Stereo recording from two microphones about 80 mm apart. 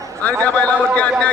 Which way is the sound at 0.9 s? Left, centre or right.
Centre.